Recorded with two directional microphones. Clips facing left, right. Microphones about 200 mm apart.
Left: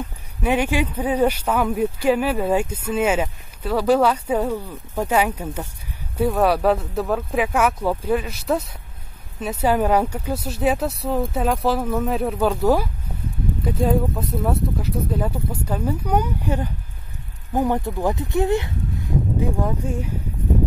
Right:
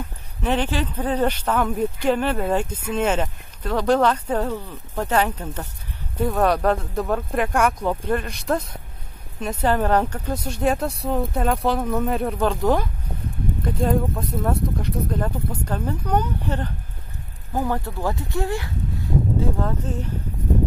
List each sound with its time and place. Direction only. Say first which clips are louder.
0.4 s speech: left 2 dB; 10° left (ahead or behind)